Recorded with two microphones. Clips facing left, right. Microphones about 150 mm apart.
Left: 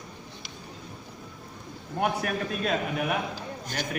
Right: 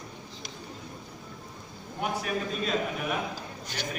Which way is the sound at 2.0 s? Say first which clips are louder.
Left 3 dB; 55° left (ahead or behind).